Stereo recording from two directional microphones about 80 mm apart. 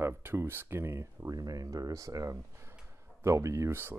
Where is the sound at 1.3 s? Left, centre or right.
Right.